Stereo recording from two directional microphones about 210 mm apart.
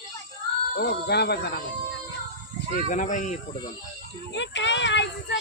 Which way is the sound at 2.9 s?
35° left (ahead or behind).